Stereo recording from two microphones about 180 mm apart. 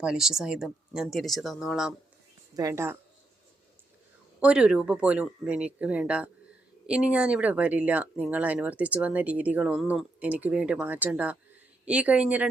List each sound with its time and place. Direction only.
0.0 s speech: 5° right (ahead or behind)
2.6 s speech: 15° right (ahead or behind)
4.4 s speech: 5° right (ahead or behind)